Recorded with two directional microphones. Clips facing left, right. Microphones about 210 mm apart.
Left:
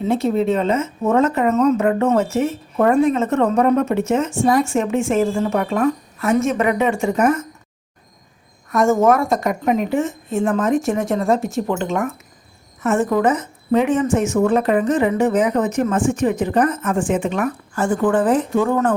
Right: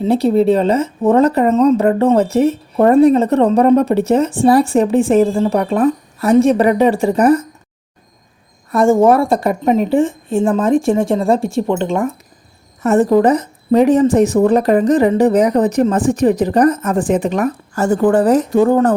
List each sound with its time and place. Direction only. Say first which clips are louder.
0.0 s speech: right 5 dB; 35° right (ahead or behind)
8.7 s speech: right 4 dB; 30° right (ahead or behind)